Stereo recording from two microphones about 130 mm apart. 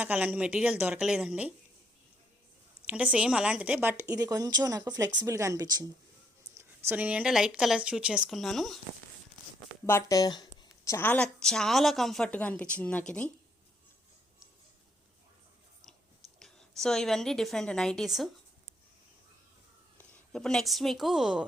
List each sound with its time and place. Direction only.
0.0 s speech: 10° right (ahead or behind)
2.8 s a woman's voice: 10° right (ahead or behind); by 5.8 s 30° right (ahead or behind)
6.6 s speech: 15° right (ahead or behind); by 8.8 s centre (ahead or behind)
9.8 s a sound: 25° left (ahead or behind)
10.9 s a woman's voice: 15° left (ahead or behind)
16.4 s a woman's voice: 5° left (ahead or behind)
20.0 s speech: 5° left (ahead or behind)